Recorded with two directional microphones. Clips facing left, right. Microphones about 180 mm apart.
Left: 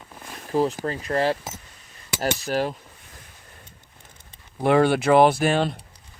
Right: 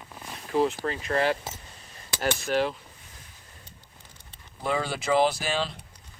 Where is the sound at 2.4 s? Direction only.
40° left (ahead or behind).